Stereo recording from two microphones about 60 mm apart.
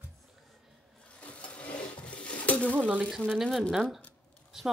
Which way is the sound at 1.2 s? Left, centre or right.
Left.